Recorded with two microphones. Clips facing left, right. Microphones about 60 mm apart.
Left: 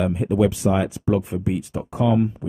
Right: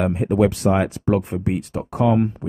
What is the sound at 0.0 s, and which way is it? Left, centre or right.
Speech, right.